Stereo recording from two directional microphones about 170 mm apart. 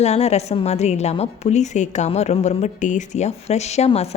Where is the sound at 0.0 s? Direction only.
40° left (ahead or behind).